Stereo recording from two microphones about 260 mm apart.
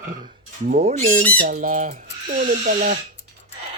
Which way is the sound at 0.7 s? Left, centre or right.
Right.